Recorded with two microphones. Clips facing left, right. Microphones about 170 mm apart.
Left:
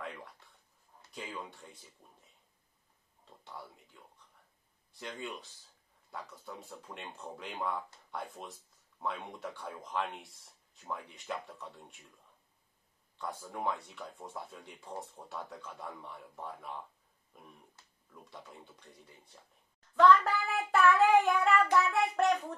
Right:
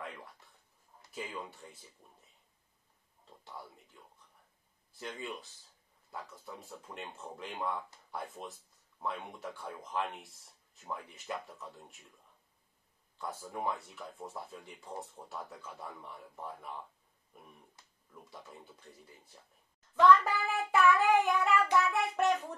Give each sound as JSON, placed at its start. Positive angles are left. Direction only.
{"t": 1.1, "sound": "speech", "side_deg": 0}
{"t": 3.4, "sound": "speech", "side_deg": 0}
{"t": 4.9, "sound": "speech", "side_deg": 0}
{"t": 13.2, "sound": "speech", "side_deg": 0}
{"t": 18.3, "sound": "speech", "side_deg": 0}